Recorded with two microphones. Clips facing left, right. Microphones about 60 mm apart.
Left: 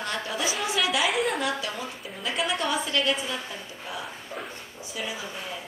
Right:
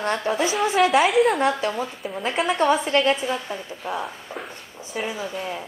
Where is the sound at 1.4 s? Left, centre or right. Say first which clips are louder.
Right 7 dB; right.